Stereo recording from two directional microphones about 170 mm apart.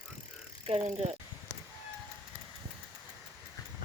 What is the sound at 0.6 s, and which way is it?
Speech, 35° right (ahead or behind).